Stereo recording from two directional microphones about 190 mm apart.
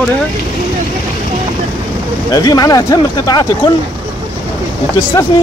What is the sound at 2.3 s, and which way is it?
Speech, 20° left (ahead or behind).